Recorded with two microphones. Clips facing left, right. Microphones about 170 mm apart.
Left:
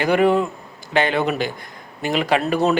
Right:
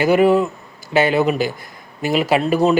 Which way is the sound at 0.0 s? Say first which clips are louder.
Right 3 dB; 5° right (ahead or behind).